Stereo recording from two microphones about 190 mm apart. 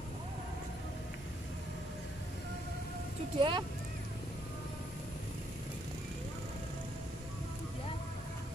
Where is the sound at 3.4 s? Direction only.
25° right (ahead or behind).